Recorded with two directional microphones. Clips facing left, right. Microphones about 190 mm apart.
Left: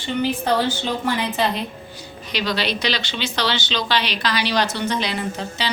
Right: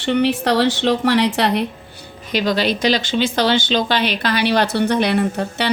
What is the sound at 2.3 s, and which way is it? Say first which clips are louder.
Speech: right 6 dB; 50° right (ahead or behind).